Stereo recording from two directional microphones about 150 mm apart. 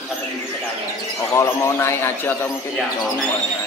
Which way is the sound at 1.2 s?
20° left (ahead or behind).